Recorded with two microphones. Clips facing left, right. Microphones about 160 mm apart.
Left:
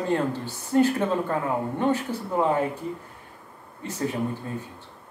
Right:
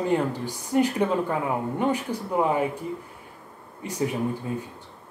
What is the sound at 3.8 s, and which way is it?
Speech, 10° right (ahead or behind).